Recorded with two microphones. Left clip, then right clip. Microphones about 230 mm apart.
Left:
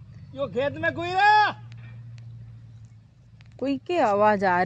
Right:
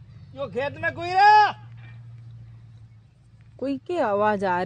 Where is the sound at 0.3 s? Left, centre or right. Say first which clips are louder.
Left 2 dB; right.